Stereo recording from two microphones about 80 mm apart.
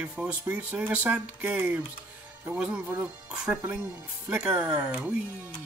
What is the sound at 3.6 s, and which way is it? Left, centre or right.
Speech, right.